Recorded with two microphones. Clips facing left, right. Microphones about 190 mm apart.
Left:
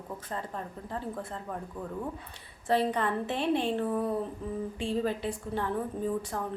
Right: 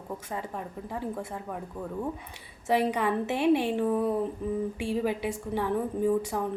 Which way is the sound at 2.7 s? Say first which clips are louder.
Right 2 dB; 10° right (ahead or behind).